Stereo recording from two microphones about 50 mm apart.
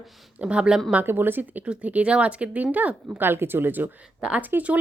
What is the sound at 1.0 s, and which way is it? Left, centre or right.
Speech, right.